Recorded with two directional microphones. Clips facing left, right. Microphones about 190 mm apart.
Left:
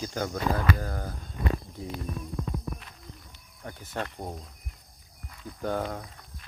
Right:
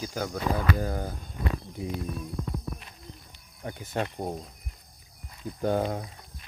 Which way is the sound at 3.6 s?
15° right (ahead or behind).